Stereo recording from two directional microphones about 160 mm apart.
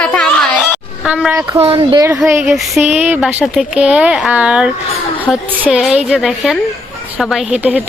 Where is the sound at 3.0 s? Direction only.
10° right (ahead or behind).